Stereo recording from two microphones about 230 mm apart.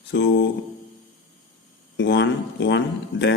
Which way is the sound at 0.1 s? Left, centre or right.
Left.